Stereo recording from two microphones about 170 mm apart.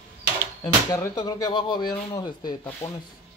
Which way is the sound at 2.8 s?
40° left (ahead or behind).